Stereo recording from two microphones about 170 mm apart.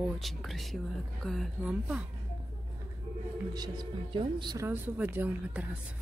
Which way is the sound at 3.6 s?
25° right (ahead or behind).